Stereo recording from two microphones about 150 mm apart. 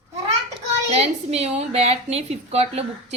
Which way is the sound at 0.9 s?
45° right (ahead or behind).